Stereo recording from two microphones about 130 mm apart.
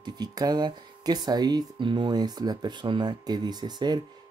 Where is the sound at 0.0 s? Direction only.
30° right (ahead or behind).